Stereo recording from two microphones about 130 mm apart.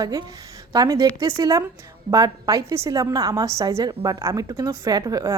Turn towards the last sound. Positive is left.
turn(degrees=-30)  # may be behind; listen again after turning